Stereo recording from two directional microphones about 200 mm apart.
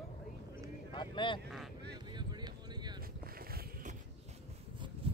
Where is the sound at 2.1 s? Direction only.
20° right (ahead or behind).